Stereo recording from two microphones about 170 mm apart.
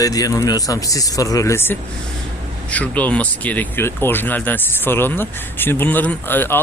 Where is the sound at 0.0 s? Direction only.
20° left (ahead or behind).